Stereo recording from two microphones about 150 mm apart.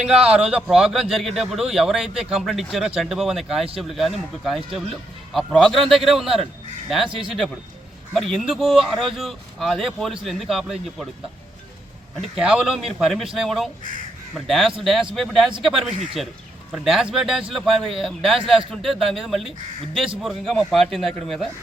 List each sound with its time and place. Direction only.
0.0 s a man's voice: 5° right (ahead or behind)
8.1 s a man's voice: centre (ahead or behind)
12.2 s a man's voice: 5° right (ahead or behind)